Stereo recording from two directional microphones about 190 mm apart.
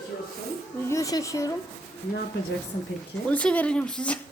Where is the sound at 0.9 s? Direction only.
15° left (ahead or behind).